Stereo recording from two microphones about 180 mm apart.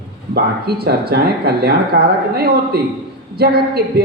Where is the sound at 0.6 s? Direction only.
60° right (ahead or behind).